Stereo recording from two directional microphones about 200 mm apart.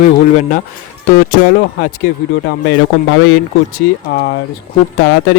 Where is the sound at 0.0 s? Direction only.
35° left (ahead or behind).